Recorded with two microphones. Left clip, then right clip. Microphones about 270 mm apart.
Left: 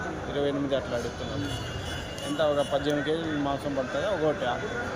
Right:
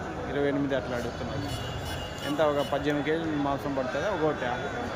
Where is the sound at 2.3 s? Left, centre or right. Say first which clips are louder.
Left 1 dB; centre.